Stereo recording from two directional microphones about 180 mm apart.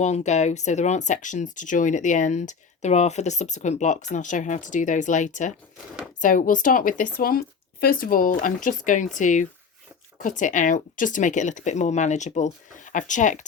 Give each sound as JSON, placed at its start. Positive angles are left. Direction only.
{"t": 0.0, "sound": "speech", "side_deg": 40}